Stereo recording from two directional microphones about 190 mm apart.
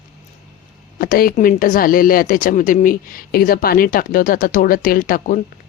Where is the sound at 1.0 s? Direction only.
50° left (ahead or behind).